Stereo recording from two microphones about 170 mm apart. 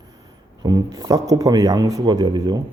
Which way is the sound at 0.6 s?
25° right (ahead or behind).